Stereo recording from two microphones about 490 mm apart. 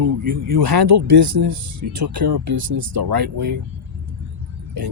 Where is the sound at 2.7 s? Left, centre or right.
Right.